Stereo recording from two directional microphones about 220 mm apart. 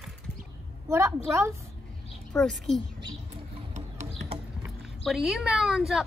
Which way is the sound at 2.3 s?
5° left (ahead or behind).